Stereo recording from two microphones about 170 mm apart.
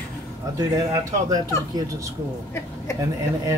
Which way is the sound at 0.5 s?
20° right (ahead or behind).